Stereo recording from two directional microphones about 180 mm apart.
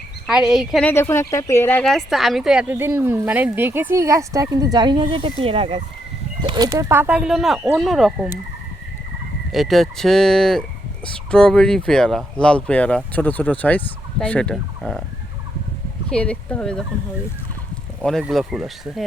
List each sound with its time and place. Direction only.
0.3 s speech: 5° right (ahead or behind)
0.9 s speech: 10° left (ahead or behind)
1.8 s speech: centre (ahead or behind)
9.5 s speech: centre (ahead or behind)
16.0 s speech: 5° left (ahead or behind)
18.0 s speech: centre (ahead or behind)